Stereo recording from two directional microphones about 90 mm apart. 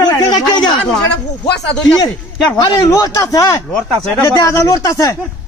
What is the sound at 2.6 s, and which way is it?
A man's voice, 45° left (ahead or behind).